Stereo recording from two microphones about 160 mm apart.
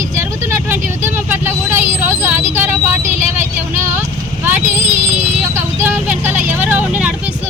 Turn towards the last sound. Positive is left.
turn(degrees=-10)  # may be behind; listen again after turning